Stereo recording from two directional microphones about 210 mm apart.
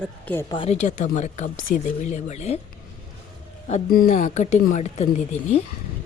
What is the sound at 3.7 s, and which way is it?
Speech, 40° left (ahead or behind).